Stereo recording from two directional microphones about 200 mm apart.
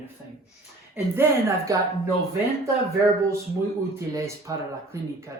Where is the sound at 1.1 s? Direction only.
15° right (ahead or behind).